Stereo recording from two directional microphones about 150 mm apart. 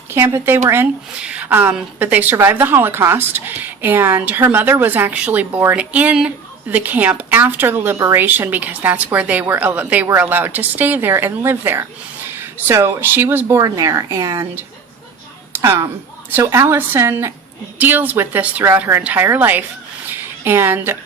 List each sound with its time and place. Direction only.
0.1 s a woman's voice: 15° right (ahead or behind)
15.5 s a sound: 15° right (ahead or behind)
16.4 s a woman's voice: 20° right (ahead or behind)